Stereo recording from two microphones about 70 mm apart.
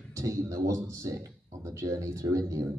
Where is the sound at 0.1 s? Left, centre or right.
Right.